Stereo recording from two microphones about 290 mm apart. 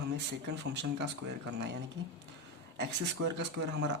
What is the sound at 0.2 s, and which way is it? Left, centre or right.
Speech, right.